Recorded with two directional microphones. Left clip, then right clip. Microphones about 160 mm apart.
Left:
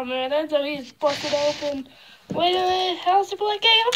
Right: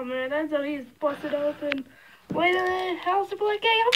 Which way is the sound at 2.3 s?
30° right (ahead or behind).